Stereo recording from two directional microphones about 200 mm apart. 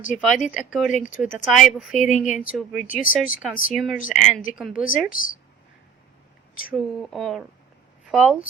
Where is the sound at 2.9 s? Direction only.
40° left (ahead or behind).